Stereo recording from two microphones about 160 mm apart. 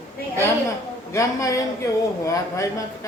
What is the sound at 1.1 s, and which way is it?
Speech, 20° left (ahead or behind).